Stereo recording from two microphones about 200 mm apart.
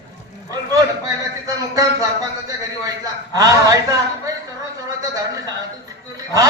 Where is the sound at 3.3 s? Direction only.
15° right (ahead or behind).